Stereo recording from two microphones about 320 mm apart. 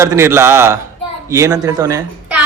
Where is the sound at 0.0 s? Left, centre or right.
Centre.